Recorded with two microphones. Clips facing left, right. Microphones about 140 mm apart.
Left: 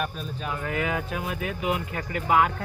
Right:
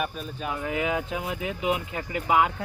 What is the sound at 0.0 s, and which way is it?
Speech, 10° right (ahead or behind).